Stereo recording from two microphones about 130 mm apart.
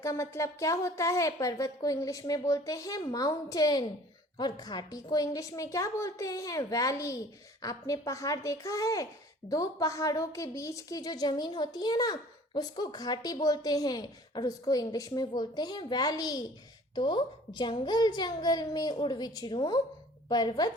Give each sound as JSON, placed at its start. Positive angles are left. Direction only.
{"t": 0.0, "sound": "a woman's voice", "side_deg": 25}